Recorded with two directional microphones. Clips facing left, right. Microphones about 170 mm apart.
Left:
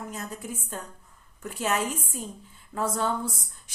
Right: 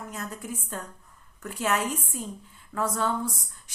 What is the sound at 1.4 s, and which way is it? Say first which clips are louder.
A woman's voice: even; 25° left (ahead or behind).